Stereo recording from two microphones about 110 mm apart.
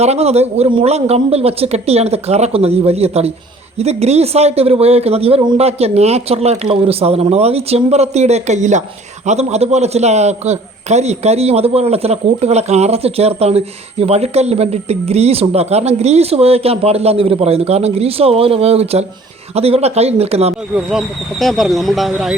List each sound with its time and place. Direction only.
0.0 s speech: 75° right (ahead or behind)
21.3 s speech: centre (ahead or behind)